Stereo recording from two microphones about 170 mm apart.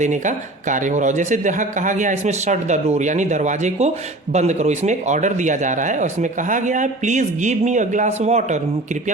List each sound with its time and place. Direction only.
0.0 s speech: 45° right (ahead or behind)